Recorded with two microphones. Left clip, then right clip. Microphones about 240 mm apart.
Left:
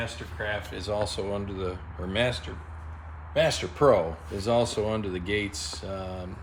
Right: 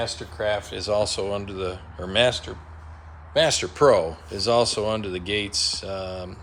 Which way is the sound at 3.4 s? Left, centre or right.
Centre.